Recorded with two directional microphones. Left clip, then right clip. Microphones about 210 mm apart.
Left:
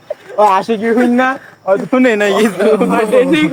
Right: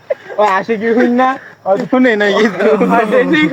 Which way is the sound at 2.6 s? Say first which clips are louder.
Right 1 dB; 15° left (ahead or behind).